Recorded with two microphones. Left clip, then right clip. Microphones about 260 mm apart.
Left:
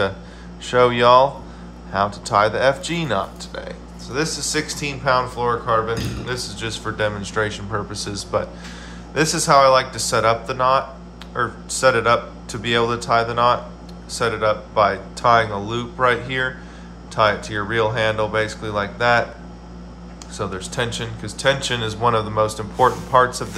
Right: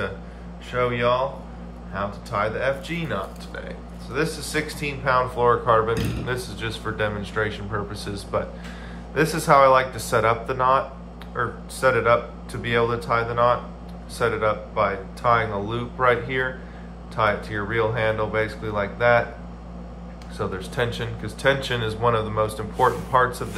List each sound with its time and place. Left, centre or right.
0.7 s speech: centre
20.3 s speech: centre